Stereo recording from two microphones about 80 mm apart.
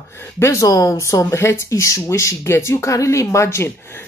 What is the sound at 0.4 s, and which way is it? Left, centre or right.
Speech, left.